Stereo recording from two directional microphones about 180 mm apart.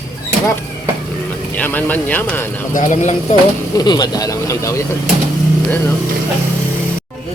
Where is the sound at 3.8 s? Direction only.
20° left (ahead or behind).